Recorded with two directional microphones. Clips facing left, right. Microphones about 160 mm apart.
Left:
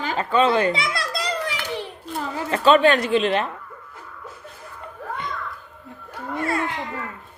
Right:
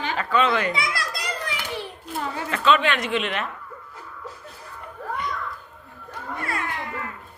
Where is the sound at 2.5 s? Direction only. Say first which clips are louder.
Left 6 dB; 40° left (ahead or behind).